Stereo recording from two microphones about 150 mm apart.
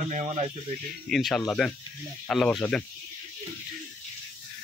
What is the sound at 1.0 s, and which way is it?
Speech, centre (ahead or behind).